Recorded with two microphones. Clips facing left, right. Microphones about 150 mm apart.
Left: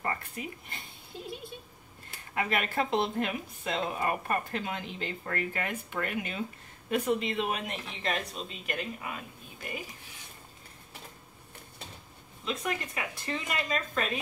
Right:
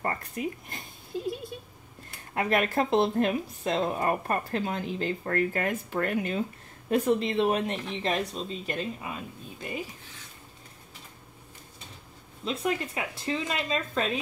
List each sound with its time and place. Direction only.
0.0 s a sound: 45° right (ahead or behind)
2.3 s speech: 40° right (ahead or behind); by 9.2 s 25° right (ahead or behind)
12.4 s speech: 25° right (ahead or behind)